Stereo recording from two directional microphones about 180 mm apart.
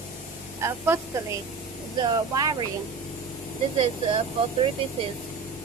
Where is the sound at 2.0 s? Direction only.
20° right (ahead or behind).